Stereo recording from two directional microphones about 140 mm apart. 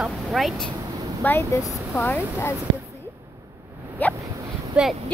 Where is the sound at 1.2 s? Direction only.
20° left (ahead or behind).